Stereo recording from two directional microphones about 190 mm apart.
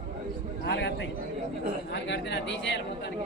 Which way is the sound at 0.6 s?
65° left (ahead or behind).